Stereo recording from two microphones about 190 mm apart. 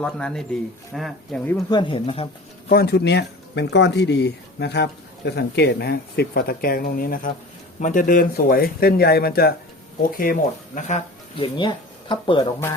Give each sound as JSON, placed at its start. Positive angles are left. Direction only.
{"t": 0.0, "sound": "speech", "side_deg": 5}
{"t": 1.5, "sound": "speech", "side_deg": 20}
{"t": 2.6, "sound": "speech", "side_deg": 55}
{"t": 11.5, "sound": "speech", "side_deg": 25}